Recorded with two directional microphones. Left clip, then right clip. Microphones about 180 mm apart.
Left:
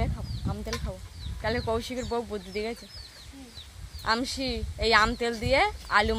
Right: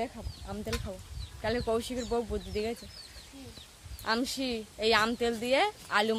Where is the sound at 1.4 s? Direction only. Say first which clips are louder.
Left 2 dB; 5° right (ahead or behind).